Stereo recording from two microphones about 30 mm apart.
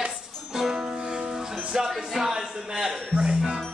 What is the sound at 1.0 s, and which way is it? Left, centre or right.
Music, right.